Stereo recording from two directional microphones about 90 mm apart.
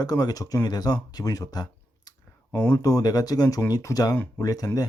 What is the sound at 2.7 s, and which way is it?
Speech, 40° left (ahead or behind).